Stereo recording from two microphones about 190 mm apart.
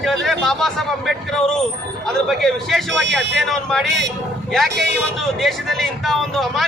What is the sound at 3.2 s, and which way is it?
Speech, 65° right (ahead or behind).